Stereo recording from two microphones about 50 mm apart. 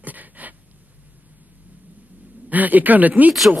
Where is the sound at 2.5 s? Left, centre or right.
Right.